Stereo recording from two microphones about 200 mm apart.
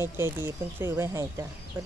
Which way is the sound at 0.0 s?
10° right (ahead or behind).